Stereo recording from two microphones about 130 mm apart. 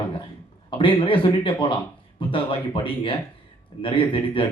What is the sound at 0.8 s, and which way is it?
A man's voice, 40° left (ahead or behind).